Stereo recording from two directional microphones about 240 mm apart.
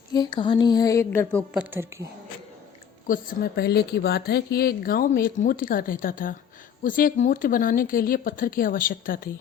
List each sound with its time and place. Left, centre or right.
0.1 s speech: centre
1.5 s a woman's voice: centre
3.1 s speech: left